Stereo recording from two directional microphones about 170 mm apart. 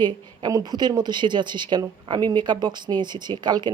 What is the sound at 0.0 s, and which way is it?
Speech, 25° right (ahead or behind).